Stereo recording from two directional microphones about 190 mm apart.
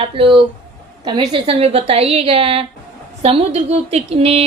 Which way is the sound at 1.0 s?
25° right (ahead or behind).